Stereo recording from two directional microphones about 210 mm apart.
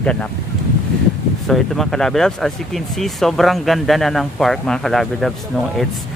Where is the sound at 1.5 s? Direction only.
Centre (ahead or behind).